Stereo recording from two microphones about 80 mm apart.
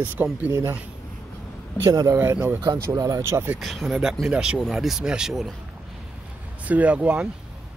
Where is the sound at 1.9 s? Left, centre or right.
Right.